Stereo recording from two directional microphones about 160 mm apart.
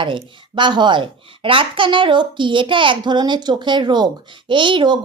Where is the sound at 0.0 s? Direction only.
30° right (ahead or behind).